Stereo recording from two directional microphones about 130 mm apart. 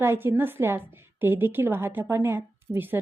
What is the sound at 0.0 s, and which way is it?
A woman's voice, 20° right (ahead or behind).